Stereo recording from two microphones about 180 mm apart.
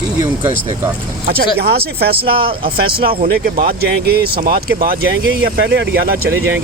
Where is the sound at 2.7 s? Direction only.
55° right (ahead or behind); by 5.9 s 70° right (ahead or behind).